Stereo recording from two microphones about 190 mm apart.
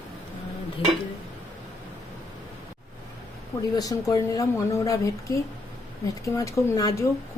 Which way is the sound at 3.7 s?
15° left (ahead or behind).